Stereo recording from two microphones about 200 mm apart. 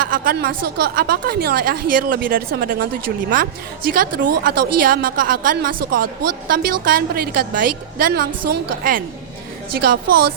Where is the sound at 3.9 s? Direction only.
45° right (ahead or behind).